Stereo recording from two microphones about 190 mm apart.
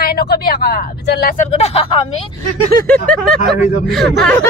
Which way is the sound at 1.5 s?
35° left (ahead or behind).